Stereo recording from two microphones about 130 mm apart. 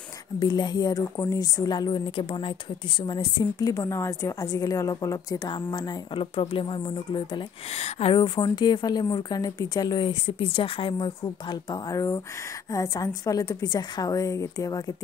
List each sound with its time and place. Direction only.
0.4 s a woman's voice: 35° left (ahead or behind)
7.7 s speech: 50° left (ahead or behind)
8.2 s a woman's voice: 35° left (ahead or behind)